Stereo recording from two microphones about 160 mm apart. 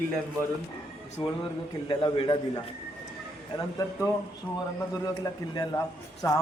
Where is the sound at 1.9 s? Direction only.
30° left (ahead or behind).